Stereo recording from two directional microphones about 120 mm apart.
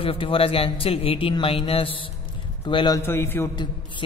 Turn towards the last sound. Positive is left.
turn(degrees=20)  # may be behind; listen again after turning